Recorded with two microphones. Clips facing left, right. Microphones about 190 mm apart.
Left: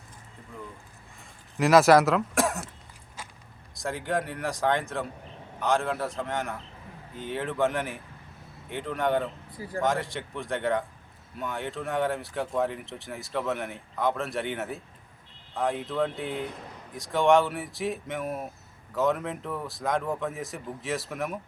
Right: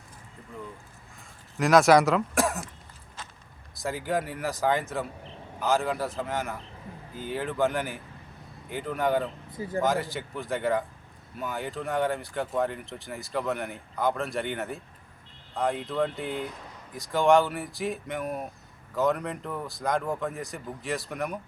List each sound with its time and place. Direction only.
1.5 s speech: centre (ahead or behind)
3.2 s walk: 10° left (ahead or behind)
3.8 s speech: centre (ahead or behind)
9.5 s speech: 20° right (ahead or behind)
9.8 s speech: centre (ahead or behind)